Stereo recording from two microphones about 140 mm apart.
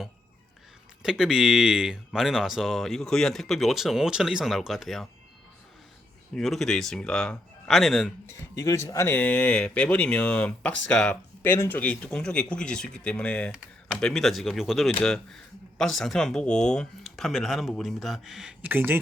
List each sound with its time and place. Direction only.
1.0 s speech: 5° right (ahead or behind)
6.3 s speech: centre (ahead or behind)
8.3 s speech: 20° left (ahead or behind); by 18.9 s 15° right (ahead or behind)